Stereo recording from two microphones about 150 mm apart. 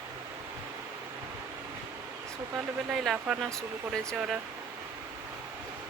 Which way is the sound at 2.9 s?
Centre (ahead or behind).